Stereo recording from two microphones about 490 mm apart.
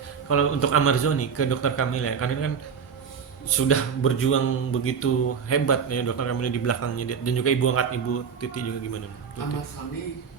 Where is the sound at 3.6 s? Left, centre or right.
Left.